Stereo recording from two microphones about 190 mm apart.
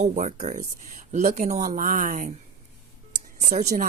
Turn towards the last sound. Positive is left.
turn(degrees=-40)  # may be behind; listen again after turning